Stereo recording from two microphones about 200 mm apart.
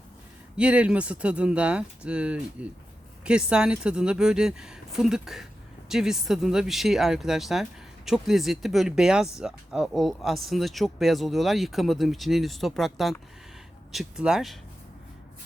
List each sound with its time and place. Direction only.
0.5 s speech: 5° right (ahead or behind)